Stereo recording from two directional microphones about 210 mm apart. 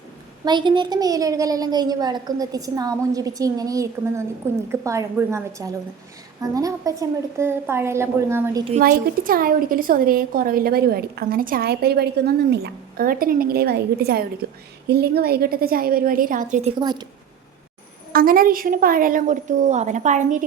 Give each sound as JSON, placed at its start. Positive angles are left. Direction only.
{"t": 0.4, "sound": "a woman's voice", "side_deg": -20}
{"t": 8.8, "sound": "a woman's voice", "side_deg": -45}
{"t": 18.1, "sound": "a woman's voice", "side_deg": -45}